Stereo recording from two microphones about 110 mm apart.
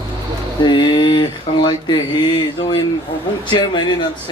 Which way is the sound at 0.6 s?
45° left (ahead or behind).